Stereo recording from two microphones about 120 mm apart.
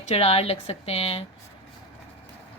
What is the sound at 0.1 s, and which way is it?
Speech, 60° left (ahead or behind).